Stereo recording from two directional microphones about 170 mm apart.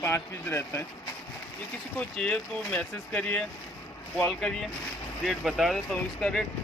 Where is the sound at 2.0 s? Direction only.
5° left (ahead or behind).